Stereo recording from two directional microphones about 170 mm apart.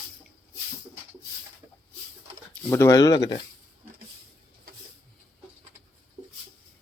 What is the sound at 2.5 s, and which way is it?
Speech, 15° left (ahead or behind).